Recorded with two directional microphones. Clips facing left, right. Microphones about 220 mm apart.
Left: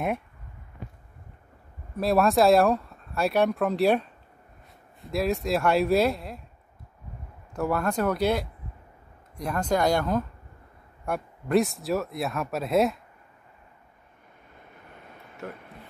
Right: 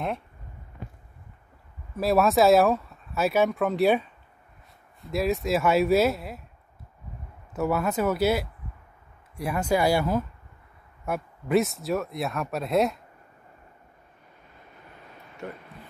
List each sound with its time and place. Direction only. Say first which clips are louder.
2.0 s speech: even; centre (ahead or behind)
7.5 s speech: right 1 dB; 5° right (ahead or behind)
15.4 s speech: right 1 dB; centre (ahead or behind)